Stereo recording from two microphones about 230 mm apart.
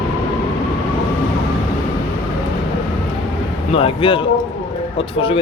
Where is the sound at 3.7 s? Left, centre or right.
Left.